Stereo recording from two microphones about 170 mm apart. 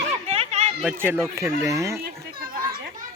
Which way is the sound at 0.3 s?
40° right (ahead or behind).